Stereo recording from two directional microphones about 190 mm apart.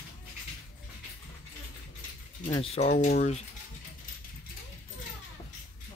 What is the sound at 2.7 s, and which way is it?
Speech, 35° left (ahead or behind).